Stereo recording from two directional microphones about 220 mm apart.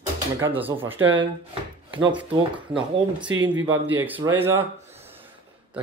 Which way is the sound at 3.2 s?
60° right (ahead or behind).